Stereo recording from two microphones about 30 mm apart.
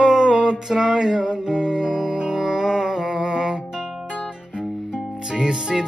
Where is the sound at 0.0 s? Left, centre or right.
Right.